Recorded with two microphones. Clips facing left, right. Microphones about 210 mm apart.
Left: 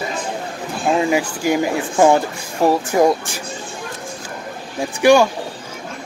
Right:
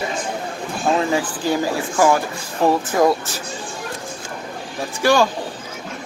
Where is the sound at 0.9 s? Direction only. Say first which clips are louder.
Left 2 dB; 15° left (ahead or behind).